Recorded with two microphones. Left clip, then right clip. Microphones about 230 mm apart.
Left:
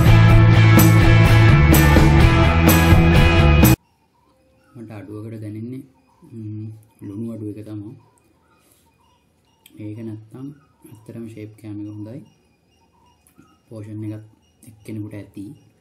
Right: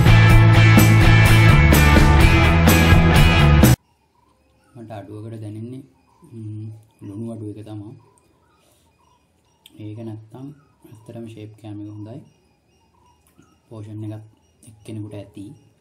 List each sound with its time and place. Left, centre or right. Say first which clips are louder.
0.0 s music: right 1 dB; centre
4.8 s a sound: even; left
14.6 s speech: left 2 dB; left